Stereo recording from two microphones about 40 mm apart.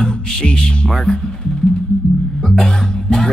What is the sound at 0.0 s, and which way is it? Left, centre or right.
Music, centre.